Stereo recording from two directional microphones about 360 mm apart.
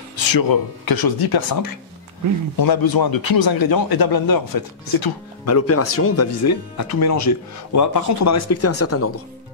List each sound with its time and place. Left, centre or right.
0.1 s speech: left
5.4 s speech: left